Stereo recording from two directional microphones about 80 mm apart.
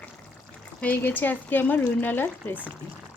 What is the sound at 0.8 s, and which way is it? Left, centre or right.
Speech, centre.